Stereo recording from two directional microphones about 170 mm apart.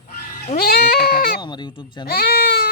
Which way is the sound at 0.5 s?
65° left (ahead or behind).